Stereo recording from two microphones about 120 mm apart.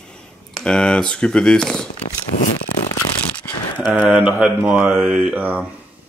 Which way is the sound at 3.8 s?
10° right (ahead or behind).